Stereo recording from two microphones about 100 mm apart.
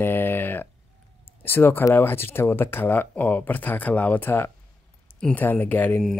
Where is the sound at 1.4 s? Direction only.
20° left (ahead or behind).